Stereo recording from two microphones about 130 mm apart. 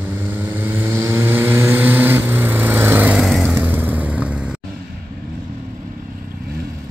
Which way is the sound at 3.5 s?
15° right (ahead or behind).